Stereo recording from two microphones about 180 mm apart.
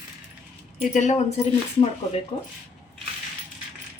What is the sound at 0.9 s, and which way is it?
Speech, 40° left (ahead or behind).